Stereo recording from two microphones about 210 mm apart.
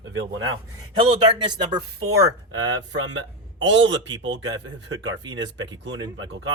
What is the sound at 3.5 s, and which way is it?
Speech, 60° right (ahead or behind).